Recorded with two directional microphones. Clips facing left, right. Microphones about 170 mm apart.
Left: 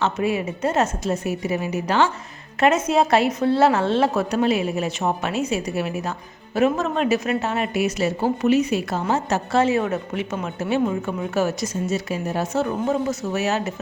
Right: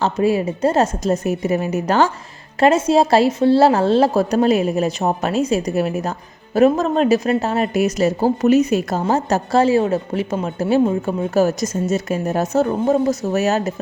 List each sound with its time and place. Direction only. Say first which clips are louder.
0.0 s a woman's voice: right 5 dB; 35° right (ahead or behind)
2.6 s a woman's voice: right 4 dB; 30° right (ahead or behind)